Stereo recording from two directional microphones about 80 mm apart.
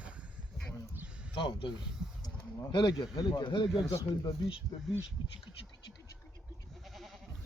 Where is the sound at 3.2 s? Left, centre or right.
Left.